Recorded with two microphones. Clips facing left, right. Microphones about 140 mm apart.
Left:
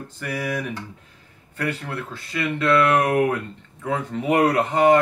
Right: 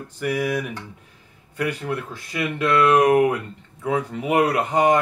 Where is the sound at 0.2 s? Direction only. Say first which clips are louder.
Right 4 dB; 10° right (ahead or behind).